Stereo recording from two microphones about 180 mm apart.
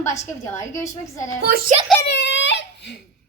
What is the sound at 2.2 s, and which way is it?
Crying, 80° left.